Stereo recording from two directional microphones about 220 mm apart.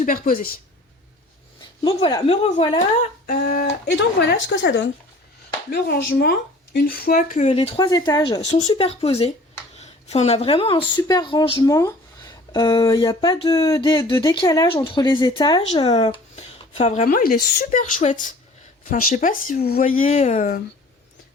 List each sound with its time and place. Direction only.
0.0 s speech: 40° left (ahead or behind)
1.8 s speech: 20° left (ahead or behind)
3.2 s speech: 45° left (ahead or behind)
4.4 s speech: 55° left (ahead or behind); by 8.4 s 15° left (ahead or behind)
8.4 s speech: 30° left (ahead or behind)